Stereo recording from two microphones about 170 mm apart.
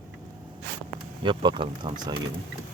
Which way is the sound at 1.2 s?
30° right (ahead or behind).